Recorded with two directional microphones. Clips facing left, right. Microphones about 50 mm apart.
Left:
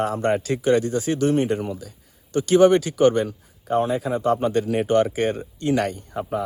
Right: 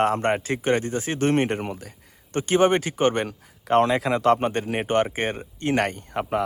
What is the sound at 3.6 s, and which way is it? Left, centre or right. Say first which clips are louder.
Speech: right 2 dB; right.